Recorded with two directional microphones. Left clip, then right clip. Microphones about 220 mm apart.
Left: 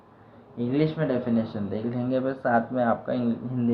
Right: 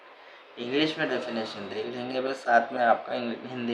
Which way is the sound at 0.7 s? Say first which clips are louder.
Even; 15° right (ahead or behind).